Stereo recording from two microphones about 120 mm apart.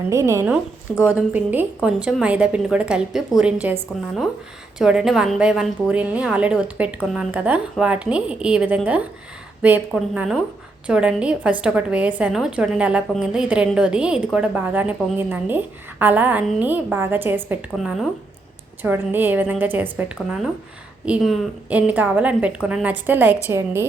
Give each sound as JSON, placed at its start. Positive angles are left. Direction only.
{"t": 0.1, "sound": "a woman's voice", "side_deg": -25}
{"t": 17.7, "sound": "speech", "side_deg": 0}
{"t": 18.8, "sound": "a woman's voice", "side_deg": -15}